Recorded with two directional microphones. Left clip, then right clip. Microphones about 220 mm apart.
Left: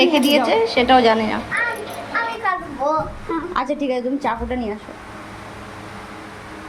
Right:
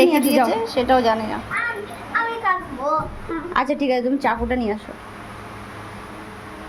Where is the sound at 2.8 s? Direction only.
25° left (ahead or behind).